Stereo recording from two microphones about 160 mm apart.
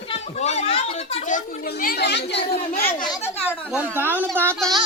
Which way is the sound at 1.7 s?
80° left.